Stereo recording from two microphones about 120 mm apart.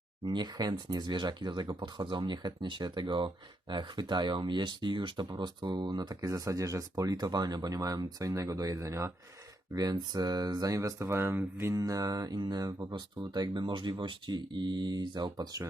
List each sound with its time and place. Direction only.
0.3 s speech: 35° right (ahead or behind)